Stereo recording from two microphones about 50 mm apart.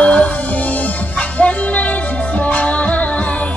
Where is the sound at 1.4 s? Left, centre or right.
Left.